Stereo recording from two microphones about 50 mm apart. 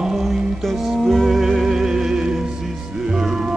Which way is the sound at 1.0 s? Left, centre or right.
Centre.